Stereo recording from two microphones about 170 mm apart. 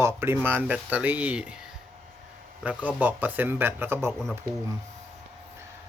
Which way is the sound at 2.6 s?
10° right (ahead or behind).